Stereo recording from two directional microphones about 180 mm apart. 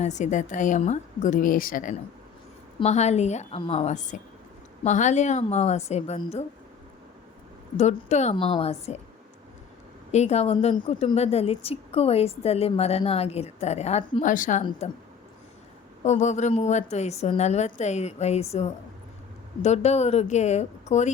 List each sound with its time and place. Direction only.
0.0 s a woman's voice: 40° left (ahead or behind)
7.8 s a woman's voice: 40° left (ahead or behind)
10.1 s a woman's voice: 40° left (ahead or behind)
16.0 s a woman's voice: 40° left (ahead or behind)